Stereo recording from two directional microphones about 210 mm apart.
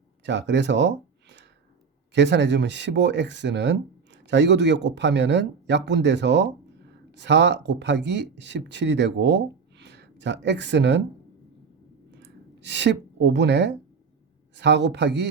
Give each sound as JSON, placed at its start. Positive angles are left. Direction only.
{"t": 0.3, "sound": "speech", "side_deg": -55}
{"t": 12.1, "sound": "a sound", "side_deg": -55}
{"t": 14.5, "sound": "speech", "side_deg": -55}